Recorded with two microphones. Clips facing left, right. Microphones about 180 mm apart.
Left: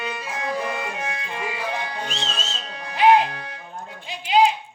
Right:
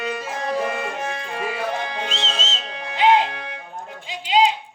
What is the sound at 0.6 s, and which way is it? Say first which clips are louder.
Music: right 3 dB; 50° right (ahead or behind).